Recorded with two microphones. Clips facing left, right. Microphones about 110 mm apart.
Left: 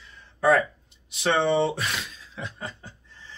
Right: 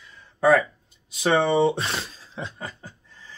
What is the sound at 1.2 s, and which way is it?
Speech, 25° right (ahead or behind).